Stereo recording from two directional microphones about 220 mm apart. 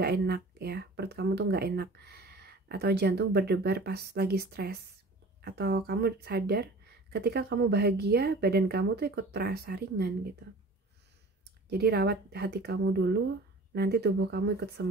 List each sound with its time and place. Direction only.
0.0 s speech: 45° right (ahead or behind)
11.7 s speech: 45° right (ahead or behind)